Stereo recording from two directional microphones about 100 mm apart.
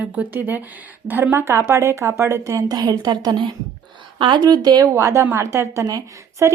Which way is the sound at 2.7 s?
40° right (ahead or behind).